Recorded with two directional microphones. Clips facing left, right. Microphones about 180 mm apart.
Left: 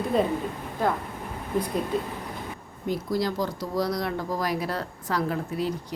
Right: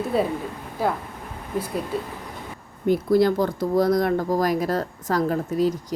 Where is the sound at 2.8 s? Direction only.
55° right (ahead or behind).